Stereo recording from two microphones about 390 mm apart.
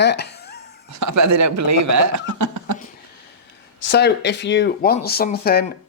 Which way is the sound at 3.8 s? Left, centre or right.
Left.